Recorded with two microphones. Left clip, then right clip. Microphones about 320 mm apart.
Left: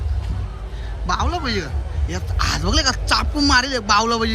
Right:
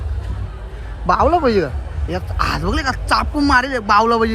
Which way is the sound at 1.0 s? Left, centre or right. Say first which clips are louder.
Right 9 dB; centre.